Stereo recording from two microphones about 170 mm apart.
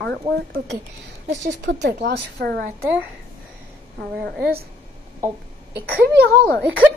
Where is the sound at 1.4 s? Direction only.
90° right; by 2.7 s 65° right (ahead or behind).